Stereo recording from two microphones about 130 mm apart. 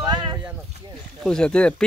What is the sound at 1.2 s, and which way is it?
Speech, 5° left (ahead or behind).